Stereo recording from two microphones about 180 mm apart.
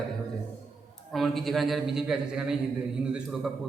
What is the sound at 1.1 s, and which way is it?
A man's voice, centre (ahead or behind).